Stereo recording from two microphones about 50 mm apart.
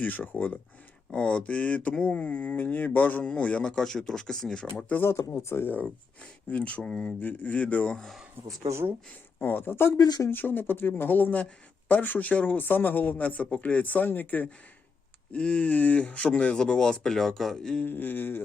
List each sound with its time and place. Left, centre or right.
0.0 s speech: left
1.1 s speech: left
2.6 s speech: left
3.6 s speech: centre
5.0 s speech: left
6.5 s speech: left
6.8 s speech: centre
7.2 s speech: left
8.4 s speech: right
9.4 s speech: left
15.3 s speech: left
16.8 s speech: centre
17.8 s speech: left